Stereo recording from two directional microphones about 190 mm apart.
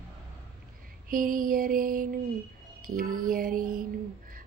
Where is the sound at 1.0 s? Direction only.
45° right (ahead or behind).